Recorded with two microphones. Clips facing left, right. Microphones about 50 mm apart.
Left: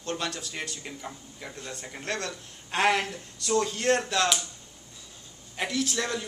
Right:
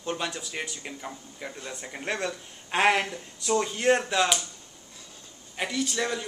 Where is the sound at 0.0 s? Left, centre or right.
Centre.